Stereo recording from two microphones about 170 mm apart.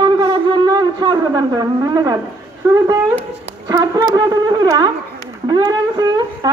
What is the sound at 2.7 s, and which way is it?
A woman's voice, 20° right (ahead or behind).